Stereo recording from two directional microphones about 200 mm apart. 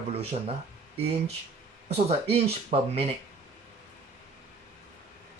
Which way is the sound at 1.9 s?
30° right (ahead or behind).